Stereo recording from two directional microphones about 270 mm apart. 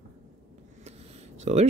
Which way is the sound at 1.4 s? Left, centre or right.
Right.